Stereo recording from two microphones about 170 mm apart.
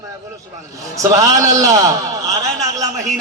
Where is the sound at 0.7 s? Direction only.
20° right (ahead or behind).